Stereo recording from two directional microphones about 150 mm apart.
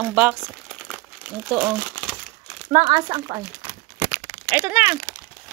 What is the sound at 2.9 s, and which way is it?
Speech, 35° right (ahead or behind).